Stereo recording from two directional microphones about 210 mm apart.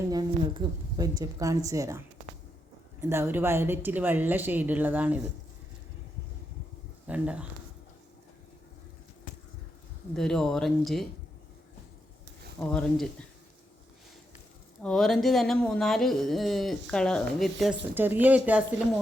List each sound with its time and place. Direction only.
0.1 s a woman's voice: 20° right (ahead or behind)
3.0 s a woman's voice: 10° right (ahead or behind)
7.1 s speech: 5° right (ahead or behind)
10.2 s speech: 5° left (ahead or behind)
12.5 s speech: 5° left (ahead or behind)
14.8 s speech: 5° left (ahead or behind)